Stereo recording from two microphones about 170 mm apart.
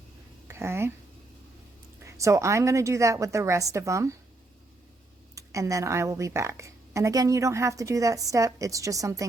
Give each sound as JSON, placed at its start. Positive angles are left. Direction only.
{"t": 0.4, "sound": "speech", "side_deg": -15}
{"t": 2.0, "sound": "a woman's voice", "side_deg": -20}
{"t": 5.3, "sound": "a woman's voice", "side_deg": -20}